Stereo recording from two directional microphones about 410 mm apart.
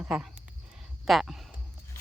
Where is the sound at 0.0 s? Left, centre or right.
Centre.